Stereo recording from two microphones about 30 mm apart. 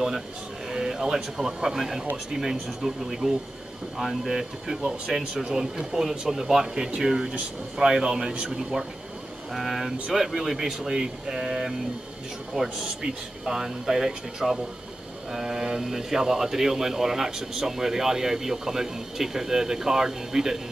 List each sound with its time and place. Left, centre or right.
0.7 s speech: centre
5.9 s speech: centre; by 12.7 s right
13.0 s speech: centre